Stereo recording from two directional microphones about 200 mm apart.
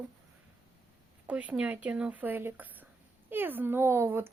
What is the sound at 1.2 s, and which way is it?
Speech, 5° right (ahead or behind).